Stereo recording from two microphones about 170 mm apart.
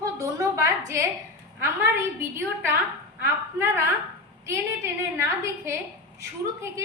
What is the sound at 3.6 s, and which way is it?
A woman's voice, 15° right (ahead or behind).